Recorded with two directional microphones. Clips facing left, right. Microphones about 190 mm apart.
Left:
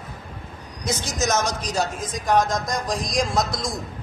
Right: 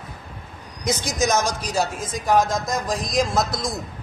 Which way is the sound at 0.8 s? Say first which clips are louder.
Right 3 dB; 15° right (ahead or behind).